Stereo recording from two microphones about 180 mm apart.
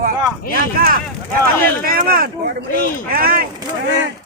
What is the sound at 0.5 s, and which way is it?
Speech, 55° right (ahead or behind).